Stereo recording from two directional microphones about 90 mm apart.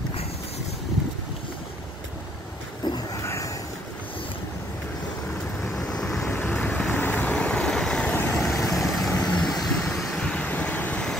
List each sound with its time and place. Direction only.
3.2 s a sound: 35° left (ahead or behind)
5.6 s vehicle: 5° left (ahead or behind)
6.3 s vehicle: 15° left (ahead or behind)
7.3 s vehicle: 10° left (ahead or behind)
9.1 s vehicle: 15° left (ahead or behind)
9.5 s vehicle: 5° left (ahead or behind)